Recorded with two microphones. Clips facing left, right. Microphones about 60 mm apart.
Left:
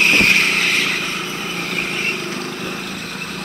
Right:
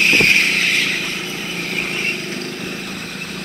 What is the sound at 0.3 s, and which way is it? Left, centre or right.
Vehicle, left.